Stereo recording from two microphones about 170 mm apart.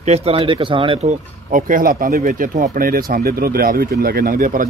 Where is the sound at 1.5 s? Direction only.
50° right (ahead or behind).